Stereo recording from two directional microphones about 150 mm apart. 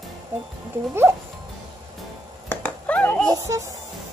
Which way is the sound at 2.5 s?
10° left (ahead or behind).